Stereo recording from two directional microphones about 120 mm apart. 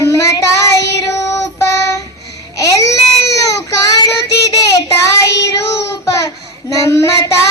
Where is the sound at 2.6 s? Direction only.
25° left (ahead or behind).